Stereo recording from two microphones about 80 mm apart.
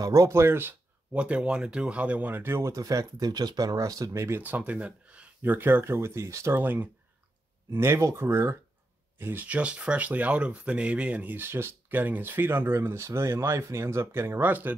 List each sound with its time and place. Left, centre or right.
0.0 s speech: right
1.1 s speech: centre
2.7 s speech: right
4.4 s speech: centre